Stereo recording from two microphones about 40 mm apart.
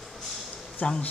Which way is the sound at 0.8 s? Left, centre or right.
Left.